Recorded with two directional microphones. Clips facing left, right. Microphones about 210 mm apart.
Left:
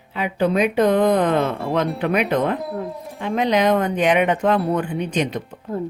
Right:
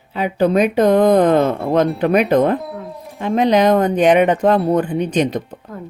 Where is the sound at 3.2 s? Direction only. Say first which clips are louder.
Right 5 dB; 35° right (ahead or behind).